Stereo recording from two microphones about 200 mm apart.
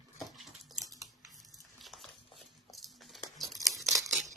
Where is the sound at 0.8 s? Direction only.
15° right (ahead or behind).